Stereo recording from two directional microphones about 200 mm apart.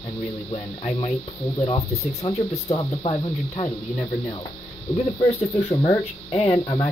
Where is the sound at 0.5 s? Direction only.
30° left (ahead or behind).